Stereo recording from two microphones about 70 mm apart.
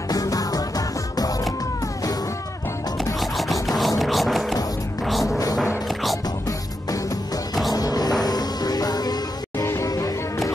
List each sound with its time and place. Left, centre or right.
0.1 s music: left
3.2 s music: centre
7.7 s music: left
9.8 s music: left